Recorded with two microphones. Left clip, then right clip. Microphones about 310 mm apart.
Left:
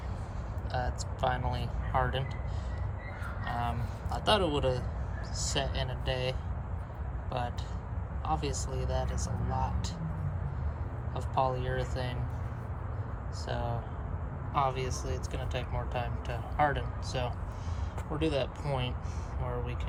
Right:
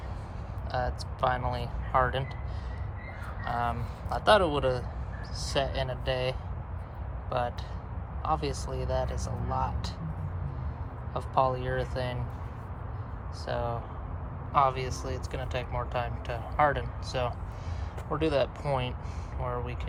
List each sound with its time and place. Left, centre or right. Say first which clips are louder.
0.7 s speech: right 4 dB; centre
3.4 s speech: right 5 dB; centre
11.1 s speech: right 4 dB; centre
13.4 s speech: right 4 dB; centre